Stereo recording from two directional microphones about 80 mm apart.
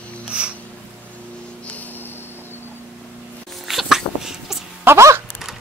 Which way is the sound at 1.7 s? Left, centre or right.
Left.